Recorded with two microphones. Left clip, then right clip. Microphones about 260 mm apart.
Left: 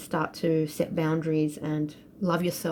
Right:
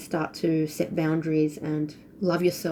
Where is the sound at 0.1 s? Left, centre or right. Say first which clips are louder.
Even; left.